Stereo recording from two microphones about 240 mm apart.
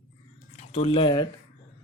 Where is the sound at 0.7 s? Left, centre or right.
Left.